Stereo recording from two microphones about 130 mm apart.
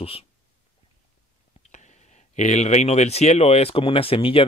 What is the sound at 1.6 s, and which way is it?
Speech, 65° left (ahead or behind).